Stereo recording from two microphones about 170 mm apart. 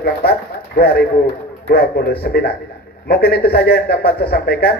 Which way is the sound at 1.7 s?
65° left (ahead or behind).